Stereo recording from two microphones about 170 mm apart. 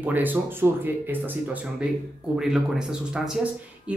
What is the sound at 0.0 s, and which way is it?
A man's voice, 10° right (ahead or behind).